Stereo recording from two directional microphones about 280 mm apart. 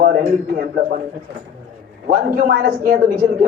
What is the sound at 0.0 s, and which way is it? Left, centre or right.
Speech, right.